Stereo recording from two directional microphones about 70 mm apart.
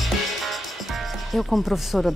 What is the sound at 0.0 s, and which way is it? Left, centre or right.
A woman's voice, centre.